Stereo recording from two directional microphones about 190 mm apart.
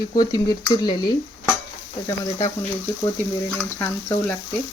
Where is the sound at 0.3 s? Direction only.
20° left (ahead or behind).